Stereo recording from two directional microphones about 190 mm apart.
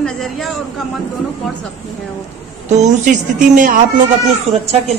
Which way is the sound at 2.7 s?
40° right (ahead or behind).